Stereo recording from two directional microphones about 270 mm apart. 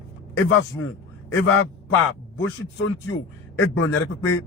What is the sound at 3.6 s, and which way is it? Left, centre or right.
Speech, left.